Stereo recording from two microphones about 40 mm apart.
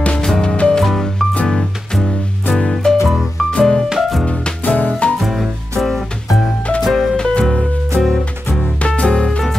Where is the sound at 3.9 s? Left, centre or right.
Centre.